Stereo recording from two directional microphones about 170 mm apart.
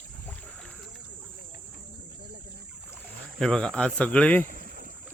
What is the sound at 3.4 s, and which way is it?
Speech, 5° left (ahead or behind).